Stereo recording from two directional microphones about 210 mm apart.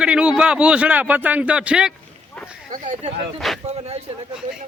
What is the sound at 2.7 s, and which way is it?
Speech, 35° right (ahead or behind).